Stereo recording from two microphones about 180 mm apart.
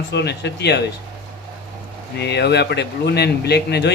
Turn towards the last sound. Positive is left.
turn(degrees=65)  # may be behind; listen again after turning